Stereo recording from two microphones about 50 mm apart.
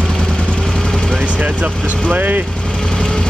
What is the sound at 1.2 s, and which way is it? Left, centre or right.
Vehicle, right.